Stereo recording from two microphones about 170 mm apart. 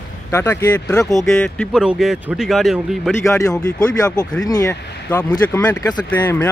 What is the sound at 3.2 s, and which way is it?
Speech, 20° left (ahead or behind).